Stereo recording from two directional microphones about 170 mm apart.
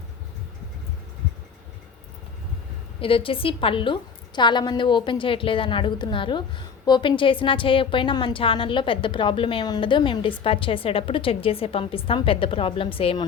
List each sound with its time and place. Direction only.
3.0 s a woman's voice: 30° left (ahead or behind)